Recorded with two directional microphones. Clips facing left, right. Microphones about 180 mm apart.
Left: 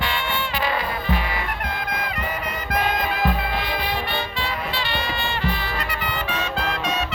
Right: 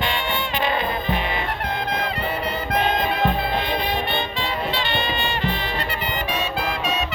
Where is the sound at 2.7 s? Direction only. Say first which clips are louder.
Right 1 dB; 25° right (ahead or behind).